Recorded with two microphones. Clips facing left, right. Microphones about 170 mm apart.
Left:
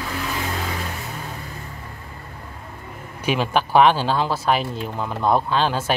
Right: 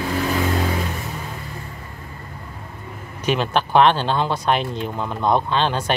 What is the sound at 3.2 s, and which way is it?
Speech, 10° left (ahead or behind).